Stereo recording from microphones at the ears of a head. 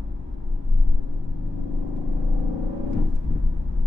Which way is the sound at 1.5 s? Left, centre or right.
Left.